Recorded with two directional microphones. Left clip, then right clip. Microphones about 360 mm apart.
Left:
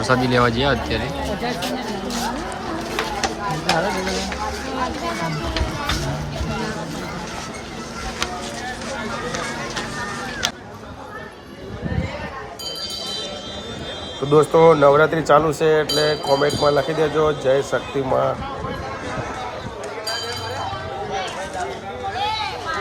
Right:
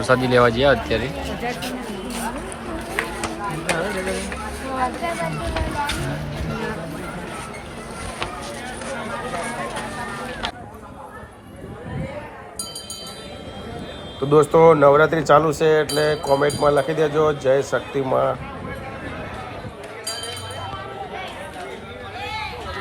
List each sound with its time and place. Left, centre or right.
0.0 s speech: centre
14.3 s speech: centre